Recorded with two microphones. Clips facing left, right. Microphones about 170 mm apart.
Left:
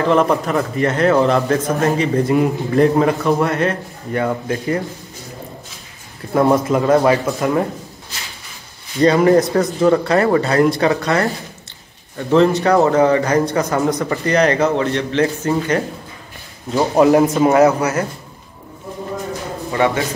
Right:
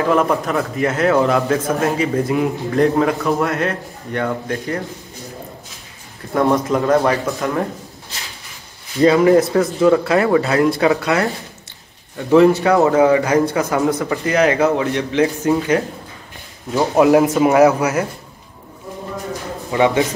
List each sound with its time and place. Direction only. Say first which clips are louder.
0.0 s a man's voice: left 1 dB; centre (ahead or behind)
6.3 s a man's voice: left 2 dB; centre (ahead or behind)
8.9 s a man's voice: even; centre (ahead or behind)
12.6 s a man's voice: even; centre (ahead or behind)
19.7 s a man's voice: right 2 dB; 15° right (ahead or behind)